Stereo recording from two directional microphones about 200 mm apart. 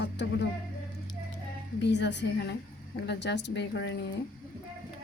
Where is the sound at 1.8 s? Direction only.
60° left (ahead or behind).